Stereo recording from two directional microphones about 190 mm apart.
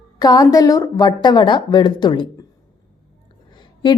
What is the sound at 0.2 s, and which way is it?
A woman's voice, 20° left (ahead or behind).